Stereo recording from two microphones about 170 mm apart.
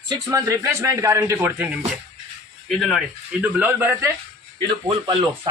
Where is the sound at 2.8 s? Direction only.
Centre (ahead or behind).